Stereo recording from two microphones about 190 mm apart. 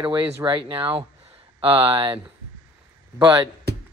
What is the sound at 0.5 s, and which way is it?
Speech, 25° right (ahead or behind).